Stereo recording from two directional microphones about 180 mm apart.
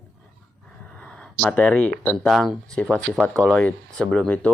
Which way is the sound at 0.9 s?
5° left (ahead or behind).